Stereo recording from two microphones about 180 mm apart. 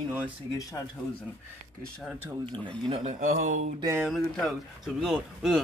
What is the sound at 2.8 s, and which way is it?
Speech, 30° right (ahead or behind).